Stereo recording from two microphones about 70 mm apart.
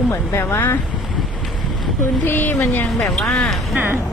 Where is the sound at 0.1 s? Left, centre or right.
Left.